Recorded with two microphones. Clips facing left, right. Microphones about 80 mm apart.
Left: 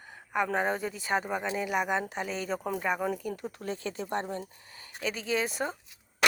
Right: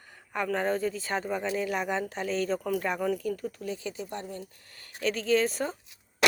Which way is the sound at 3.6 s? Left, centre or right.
Left.